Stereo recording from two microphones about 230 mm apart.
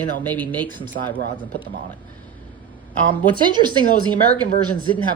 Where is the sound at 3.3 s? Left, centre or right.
Centre.